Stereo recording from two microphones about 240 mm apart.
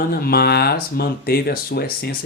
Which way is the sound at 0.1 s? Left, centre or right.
Left.